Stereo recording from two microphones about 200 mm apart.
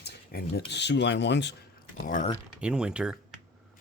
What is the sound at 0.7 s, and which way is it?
Speech, 60° left (ahead or behind).